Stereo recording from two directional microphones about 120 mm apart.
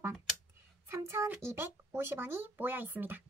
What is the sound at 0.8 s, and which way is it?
Speech, 25° right (ahead or behind).